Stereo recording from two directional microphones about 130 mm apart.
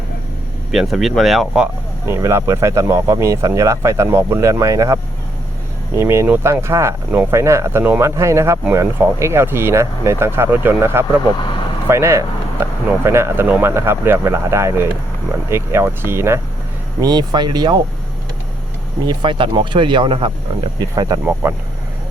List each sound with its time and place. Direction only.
0.7 s speech: centre (ahead or behind)
2.0 s speech: 20° right (ahead or behind)
17.0 s speech: 35° right (ahead or behind)
19.0 s speech: 35° right (ahead or behind)
20.7 s speech: 30° right (ahead or behind)
21.4 s speech: 20° right (ahead or behind)